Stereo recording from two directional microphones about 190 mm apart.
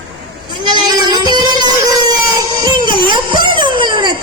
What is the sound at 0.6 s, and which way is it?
Music, 20° right (ahead or behind).